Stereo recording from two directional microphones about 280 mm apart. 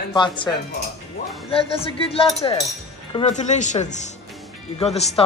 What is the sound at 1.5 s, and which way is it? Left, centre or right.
Speech, centre.